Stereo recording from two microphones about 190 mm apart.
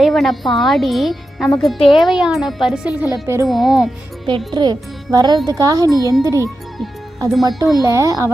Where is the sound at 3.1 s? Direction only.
15° right (ahead or behind).